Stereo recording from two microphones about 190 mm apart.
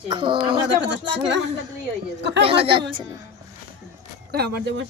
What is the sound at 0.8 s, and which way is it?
Speech, 70° right (ahead or behind).